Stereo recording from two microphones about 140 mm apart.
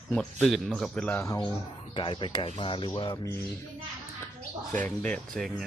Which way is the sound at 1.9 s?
35° left (ahead or behind).